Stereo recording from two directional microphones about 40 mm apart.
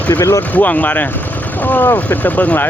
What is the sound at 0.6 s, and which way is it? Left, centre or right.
Speech, left.